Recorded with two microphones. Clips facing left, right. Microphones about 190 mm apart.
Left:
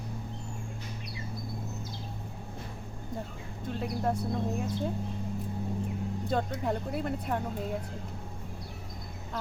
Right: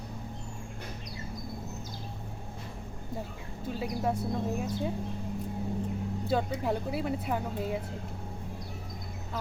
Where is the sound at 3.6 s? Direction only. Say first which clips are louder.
Even; 5° right (ahead or behind).